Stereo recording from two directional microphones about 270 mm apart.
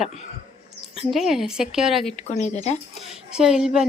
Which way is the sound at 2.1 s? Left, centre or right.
Left.